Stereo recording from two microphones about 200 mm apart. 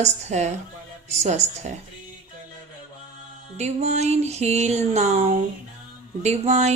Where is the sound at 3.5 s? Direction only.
35° right (ahead or behind).